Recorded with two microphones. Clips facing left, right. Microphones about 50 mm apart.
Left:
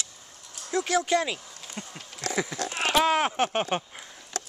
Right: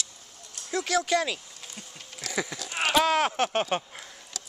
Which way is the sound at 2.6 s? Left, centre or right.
Left.